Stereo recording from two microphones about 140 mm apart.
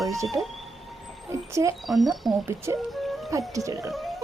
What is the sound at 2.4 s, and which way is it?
Speech, 20° right (ahead or behind).